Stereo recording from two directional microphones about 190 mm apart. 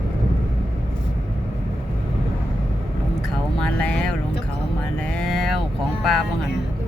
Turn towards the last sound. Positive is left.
turn(degrees=0)  # may be behind; listen again after turning